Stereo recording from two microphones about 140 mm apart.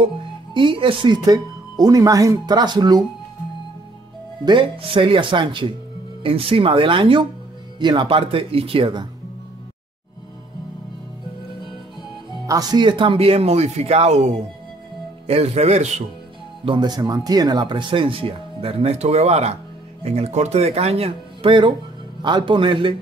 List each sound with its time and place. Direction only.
0.0 s speech: 35° right (ahead or behind)
4.5 s speech: 35° right (ahead or behind)
12.3 s speech: 25° right (ahead or behind); by 15.9 s 50° right (ahead or behind)
16.6 s speech: 30° right (ahead or behind)